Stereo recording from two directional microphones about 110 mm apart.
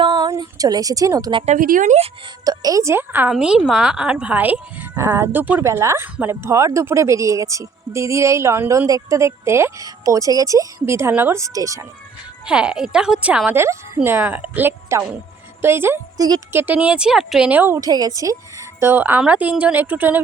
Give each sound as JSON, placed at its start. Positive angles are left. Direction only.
{"t": 0.0, "sound": "a sound", "side_deg": -35}
{"t": 1.5, "sound": "speech", "side_deg": -85}
{"t": 2.4, "sound": "speech", "side_deg": -35}
{"t": 3.3, "sound": "speech", "side_deg": -5}
{"t": 12.5, "sound": "speech", "side_deg": -10}
{"t": 13.5, "sound": "speech", "side_deg": -25}
{"t": 16.1, "sound": "speech", "side_deg": -35}
{"t": 16.5, "sound": "speech", "side_deg": -20}
{"t": 17.5, "sound": "speech", "side_deg": -15}
{"t": 17.7, "sound": "a woman's voice", "side_deg": -35}
{"t": 18.8, "sound": "speech", "side_deg": -20}